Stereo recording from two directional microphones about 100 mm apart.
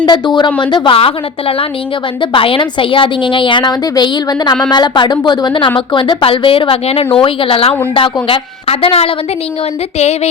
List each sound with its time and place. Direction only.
0.0 s a woman's voice: 50° left (ahead or behind); by 9.1 s 75° left (ahead or behind)